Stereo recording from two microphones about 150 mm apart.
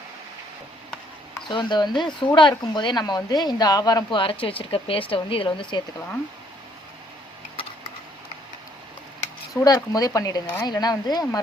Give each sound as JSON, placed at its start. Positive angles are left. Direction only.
{"t": 1.5, "sound": "a woman's voice", "side_deg": 30}
{"t": 7.5, "sound": "a sound", "side_deg": 35}
{"t": 9.5, "sound": "speech", "side_deg": 25}